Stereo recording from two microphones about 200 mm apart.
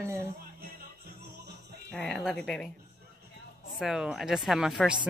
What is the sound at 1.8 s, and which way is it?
Speech, 5° left (ahead or behind).